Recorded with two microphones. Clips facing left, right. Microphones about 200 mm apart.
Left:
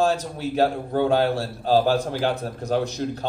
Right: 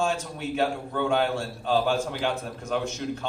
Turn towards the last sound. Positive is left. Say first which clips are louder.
# left 4 dB
turn(degrees=35)  # may be behind; listen again after turning